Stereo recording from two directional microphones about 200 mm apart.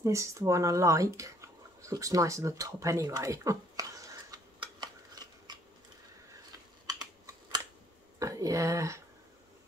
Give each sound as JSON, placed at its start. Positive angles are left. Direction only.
{"t": 0.0, "sound": "a sound", "side_deg": -15}
{"t": 6.9, "sound": "computer keyboard", "side_deg": -20}
{"t": 8.2, "sound": "speech", "side_deg": -15}